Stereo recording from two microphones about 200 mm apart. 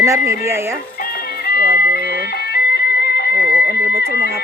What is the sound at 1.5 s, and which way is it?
Music, 50° left (ahead or behind).